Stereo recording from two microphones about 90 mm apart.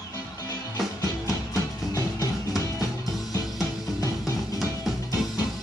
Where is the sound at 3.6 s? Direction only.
45° left (ahead or behind).